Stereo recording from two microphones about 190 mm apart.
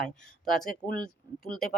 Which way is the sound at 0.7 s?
50° left (ahead or behind).